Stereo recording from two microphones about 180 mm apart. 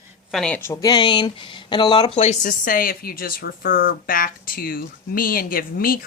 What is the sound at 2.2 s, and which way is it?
Speech, 45° left (ahead or behind).